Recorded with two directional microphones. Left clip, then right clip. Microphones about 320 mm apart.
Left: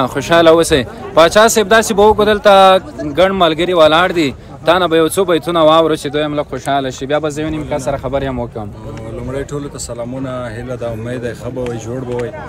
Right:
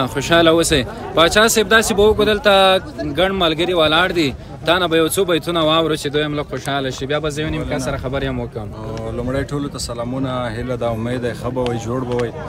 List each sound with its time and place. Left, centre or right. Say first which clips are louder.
0.0 s a man's voice: left 4 dB; centre
9.3 s speech: left 3 dB; centre